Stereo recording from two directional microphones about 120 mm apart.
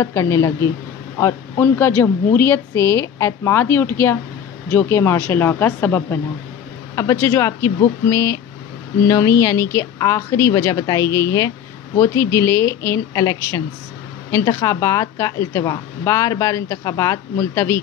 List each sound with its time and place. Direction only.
0.0 s a woman's voice: 25° left (ahead or behind)